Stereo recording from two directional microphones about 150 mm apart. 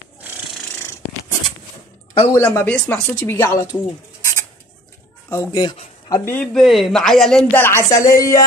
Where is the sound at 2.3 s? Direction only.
10° left (ahead or behind).